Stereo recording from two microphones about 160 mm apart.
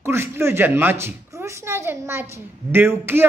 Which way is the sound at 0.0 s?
15° right (ahead or behind).